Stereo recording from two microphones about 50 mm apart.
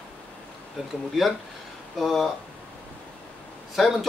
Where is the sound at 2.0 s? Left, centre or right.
Centre.